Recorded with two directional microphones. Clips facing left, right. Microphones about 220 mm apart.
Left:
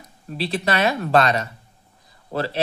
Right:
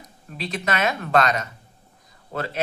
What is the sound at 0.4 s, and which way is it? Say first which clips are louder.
A woman's voice: left 4 dB; 35° left (ahead or behind).